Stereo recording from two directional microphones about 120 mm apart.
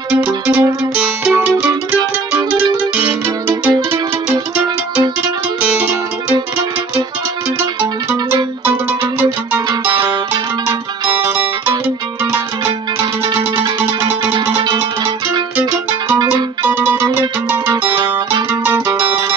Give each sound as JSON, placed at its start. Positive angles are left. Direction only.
{"t": 0.2, "sound": "music", "side_deg": -15}
{"t": 3.0, "sound": "music", "side_deg": -15}
{"t": 5.6, "sound": "music", "side_deg": -10}
{"t": 9.7, "sound": "music", "side_deg": -40}
{"t": 12.6, "sound": "music", "side_deg": -40}
{"t": 14.5, "sound": "music", "side_deg": -40}
{"t": 16.6, "sound": "music", "side_deg": -15}